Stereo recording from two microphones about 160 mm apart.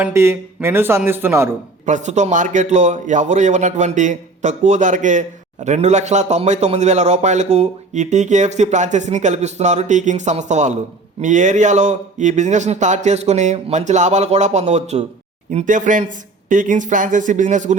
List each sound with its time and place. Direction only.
0.0 s speech: 15° right (ahead or behind)
1.8 s a man's voice: 50° right (ahead or behind)